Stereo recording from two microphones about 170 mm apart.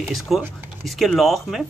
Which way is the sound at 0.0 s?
Centre (ahead or behind).